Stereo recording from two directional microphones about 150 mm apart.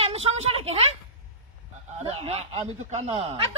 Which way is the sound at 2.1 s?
45° right (ahead or behind).